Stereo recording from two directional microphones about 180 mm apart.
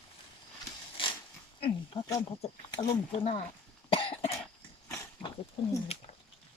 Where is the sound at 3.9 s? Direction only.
30° left (ahead or behind).